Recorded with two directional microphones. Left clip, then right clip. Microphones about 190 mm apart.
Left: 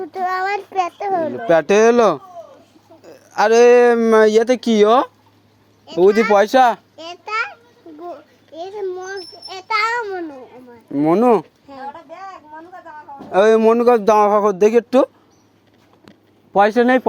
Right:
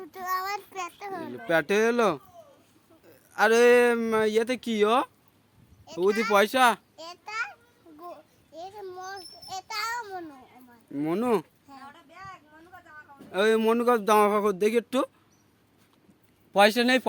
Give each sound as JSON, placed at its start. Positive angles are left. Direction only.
{"t": 0.0, "sound": "a child's voice", "side_deg": -40}
{"t": 1.5, "sound": "speech", "side_deg": -15}
{"t": 3.1, "sound": "a sound", "side_deg": -20}
{"t": 3.6, "sound": "speech", "side_deg": -15}
{"t": 6.9, "sound": "a sound", "side_deg": -50}
{"t": 8.5, "sound": "a sound", "side_deg": -50}
{"t": 10.9, "sound": "speech", "side_deg": -20}
{"t": 13.3, "sound": "speech", "side_deg": -15}
{"t": 14.8, "sound": "a child's voice", "side_deg": -30}
{"t": 16.5, "sound": "speech", "side_deg": -60}